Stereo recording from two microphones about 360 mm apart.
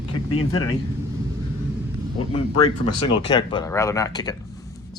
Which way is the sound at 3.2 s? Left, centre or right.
Centre.